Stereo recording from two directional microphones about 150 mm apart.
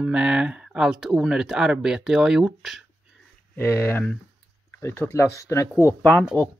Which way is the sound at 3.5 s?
15° left (ahead or behind).